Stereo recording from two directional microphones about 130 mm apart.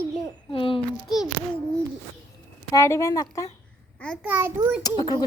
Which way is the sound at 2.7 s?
25° left (ahead or behind).